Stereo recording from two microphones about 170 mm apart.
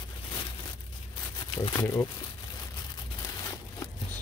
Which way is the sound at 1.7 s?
15° left (ahead or behind).